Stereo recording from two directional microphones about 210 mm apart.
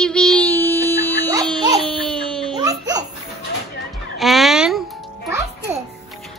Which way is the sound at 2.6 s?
15° right (ahead or behind).